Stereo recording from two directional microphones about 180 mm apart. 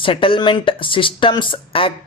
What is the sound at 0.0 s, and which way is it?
Speech, 30° left (ahead or behind).